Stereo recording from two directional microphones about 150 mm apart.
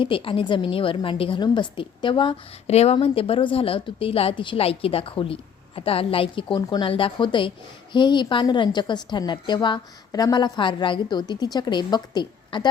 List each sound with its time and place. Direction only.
0.0 s a woman's voice: 35° left (ahead or behind)